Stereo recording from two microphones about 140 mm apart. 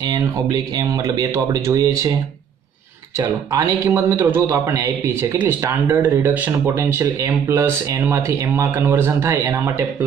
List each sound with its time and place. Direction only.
0.1 s speech: 25° right (ahead or behind)
3.5 s a man's voice: 20° right (ahead or behind)